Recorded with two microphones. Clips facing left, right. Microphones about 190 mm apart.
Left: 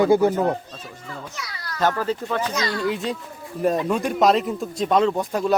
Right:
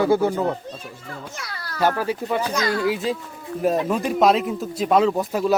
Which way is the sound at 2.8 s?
Centre (ahead or behind).